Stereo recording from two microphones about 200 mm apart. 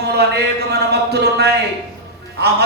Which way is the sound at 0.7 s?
55° right (ahead or behind).